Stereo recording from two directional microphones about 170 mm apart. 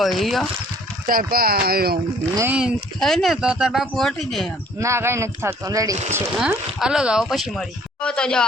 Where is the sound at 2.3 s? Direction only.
10° right (ahead or behind).